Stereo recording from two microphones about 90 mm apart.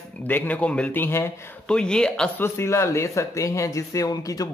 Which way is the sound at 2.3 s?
30° left (ahead or behind).